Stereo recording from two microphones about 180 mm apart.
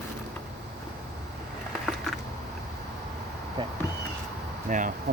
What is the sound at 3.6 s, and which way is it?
Speech, 30° right (ahead or behind).